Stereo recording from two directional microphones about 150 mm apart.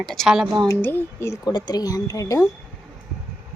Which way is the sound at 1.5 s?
30° left (ahead or behind).